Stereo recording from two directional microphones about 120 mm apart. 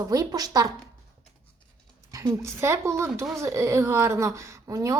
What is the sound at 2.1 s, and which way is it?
A woman's voice, 25° right (ahead or behind).